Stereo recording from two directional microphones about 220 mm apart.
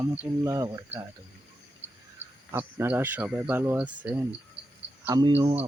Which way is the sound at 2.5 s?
10° right (ahead or behind).